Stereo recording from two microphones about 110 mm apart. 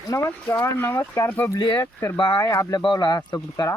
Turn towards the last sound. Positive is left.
turn(degrees=25)  # may be behind; listen again after turning